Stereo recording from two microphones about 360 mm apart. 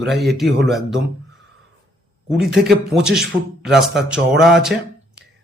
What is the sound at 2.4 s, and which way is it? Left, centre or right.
A man's voice, centre.